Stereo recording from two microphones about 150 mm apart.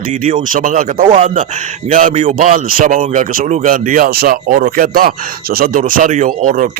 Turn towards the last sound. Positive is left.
turn(degrees=-65)  # may be behind; listen again after turning